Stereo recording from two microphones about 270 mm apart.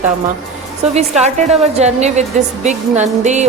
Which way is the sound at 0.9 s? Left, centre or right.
Right.